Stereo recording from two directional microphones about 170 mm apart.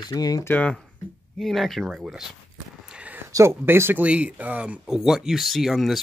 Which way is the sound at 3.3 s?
15° right (ahead or behind).